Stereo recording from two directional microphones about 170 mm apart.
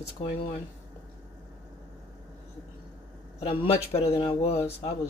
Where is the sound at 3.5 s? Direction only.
35° left (ahead or behind).